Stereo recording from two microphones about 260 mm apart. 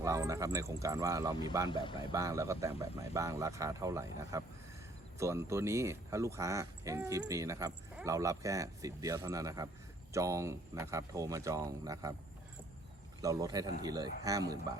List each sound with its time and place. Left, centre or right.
0.0 s speech: centre
1.7 s speech: centre
2.1 s speech: centre
13.2 s speech: centre